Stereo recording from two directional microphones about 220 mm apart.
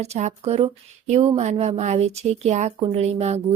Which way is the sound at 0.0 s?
30° right (ahead or behind).